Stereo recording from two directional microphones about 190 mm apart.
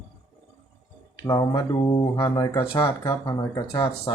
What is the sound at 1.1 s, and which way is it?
Speech, 20° left (ahead or behind).